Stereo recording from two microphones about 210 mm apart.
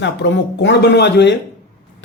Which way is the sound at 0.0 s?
55° left (ahead or behind).